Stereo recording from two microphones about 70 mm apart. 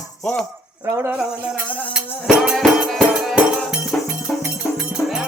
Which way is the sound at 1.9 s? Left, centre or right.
Centre.